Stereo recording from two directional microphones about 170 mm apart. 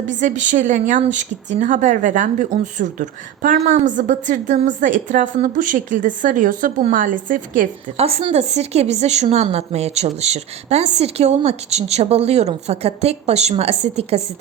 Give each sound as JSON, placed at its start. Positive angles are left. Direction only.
{"t": 0.1, "sound": "a woman's voice", "side_deg": -45}
{"t": 7.9, "sound": "a woman's voice", "side_deg": -35}